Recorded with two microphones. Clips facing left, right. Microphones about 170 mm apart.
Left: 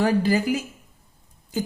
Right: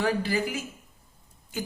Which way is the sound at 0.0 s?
40° left (ahead or behind).